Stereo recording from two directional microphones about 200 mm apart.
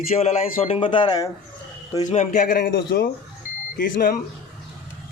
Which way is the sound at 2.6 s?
55° left (ahead or behind).